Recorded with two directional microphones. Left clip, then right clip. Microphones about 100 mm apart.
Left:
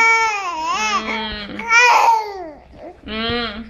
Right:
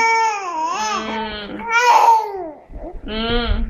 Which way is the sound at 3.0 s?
25° left (ahead or behind).